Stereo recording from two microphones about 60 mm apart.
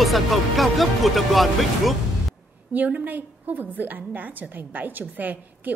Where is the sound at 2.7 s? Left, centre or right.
Right.